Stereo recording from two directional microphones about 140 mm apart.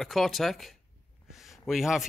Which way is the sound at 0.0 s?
Centre (ahead or behind).